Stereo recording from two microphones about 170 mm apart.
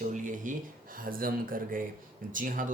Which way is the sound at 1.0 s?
55° right (ahead or behind).